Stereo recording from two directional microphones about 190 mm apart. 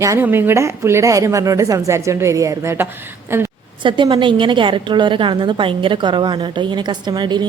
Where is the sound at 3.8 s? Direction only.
25° right (ahead or behind).